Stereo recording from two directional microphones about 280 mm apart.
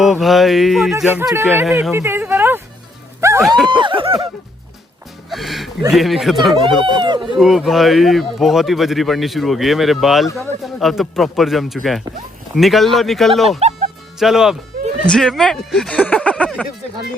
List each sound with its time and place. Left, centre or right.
0.0 s speech: centre
3.2 s music: centre
3.8 s speech: centre
5.3 s music: centre
5.8 s speech: centre
6.8 s speech: centre
7.3 s speech: centre
13.6 s music: right
14.2 s speech: centre